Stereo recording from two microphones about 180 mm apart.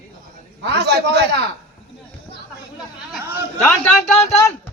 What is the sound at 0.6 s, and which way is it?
Speech, 70° right (ahead or behind).